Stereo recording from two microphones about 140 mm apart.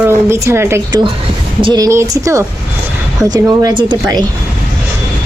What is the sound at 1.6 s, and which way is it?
Speech, 35° right (ahead or behind).